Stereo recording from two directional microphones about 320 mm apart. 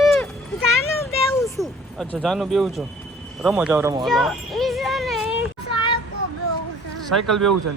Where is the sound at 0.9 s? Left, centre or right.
Centre.